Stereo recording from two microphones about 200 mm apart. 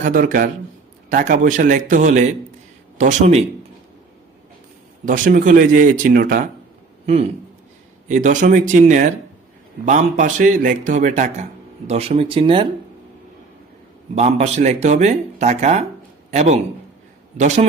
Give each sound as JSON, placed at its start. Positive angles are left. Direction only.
{"t": 0.0, "sound": "a man's voice", "side_deg": -40}
{"t": 5.0, "sound": "a man's voice", "side_deg": -40}
{"t": 7.0, "sound": "a man's voice", "side_deg": -30}
{"t": 14.2, "sound": "a man's voice", "side_deg": -35}